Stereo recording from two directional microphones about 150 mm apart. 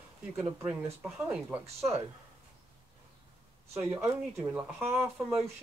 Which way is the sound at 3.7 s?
15° right (ahead or behind).